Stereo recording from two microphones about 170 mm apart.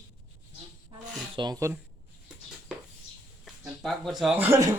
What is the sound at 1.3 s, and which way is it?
Speech, 25° right (ahead or behind).